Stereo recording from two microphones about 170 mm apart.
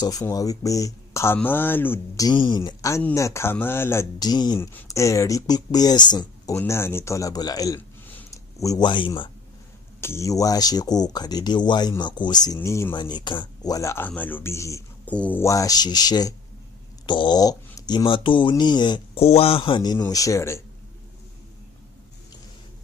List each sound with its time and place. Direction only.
0.0 s speech: 20° left (ahead or behind)
8.1 s a sound: 20° left (ahead or behind)
9.9 s speech: 15° left (ahead or behind)